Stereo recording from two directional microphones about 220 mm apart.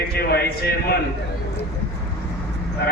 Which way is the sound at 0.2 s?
45° left (ahead or behind).